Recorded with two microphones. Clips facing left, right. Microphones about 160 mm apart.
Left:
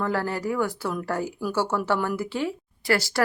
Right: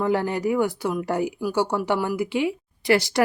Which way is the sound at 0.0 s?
20° right (ahead or behind).